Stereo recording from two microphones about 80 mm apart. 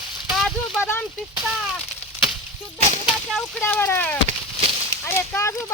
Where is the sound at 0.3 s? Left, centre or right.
Centre.